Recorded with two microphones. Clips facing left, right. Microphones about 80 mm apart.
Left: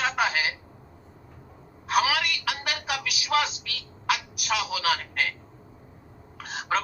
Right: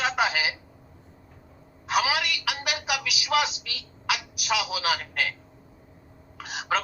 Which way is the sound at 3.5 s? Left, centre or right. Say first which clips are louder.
Left 1 dB; left.